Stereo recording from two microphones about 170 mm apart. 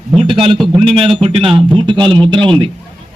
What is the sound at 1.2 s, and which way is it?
A man's voice, 35° right (ahead or behind).